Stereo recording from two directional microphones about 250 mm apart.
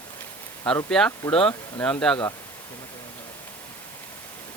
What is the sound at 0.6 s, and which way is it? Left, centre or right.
Speech, centre.